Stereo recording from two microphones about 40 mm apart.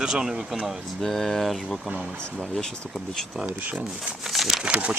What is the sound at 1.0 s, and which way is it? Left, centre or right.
Speech, centre.